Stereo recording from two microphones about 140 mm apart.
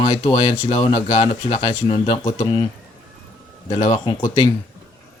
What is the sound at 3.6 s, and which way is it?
Speech, 45° left (ahead or behind).